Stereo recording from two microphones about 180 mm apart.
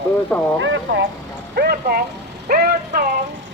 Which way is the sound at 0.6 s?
90° right.